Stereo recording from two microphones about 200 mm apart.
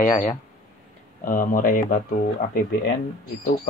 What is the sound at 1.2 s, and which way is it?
Speech, 40° left (ahead or behind).